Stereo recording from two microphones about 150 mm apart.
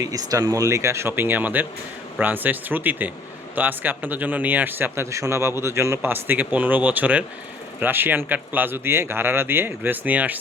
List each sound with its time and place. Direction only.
0.0 s a man's voice: 20° right (ahead or behind)